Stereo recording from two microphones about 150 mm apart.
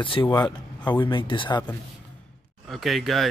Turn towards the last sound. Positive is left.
turn(degrees=0)  # may be behind; listen again after turning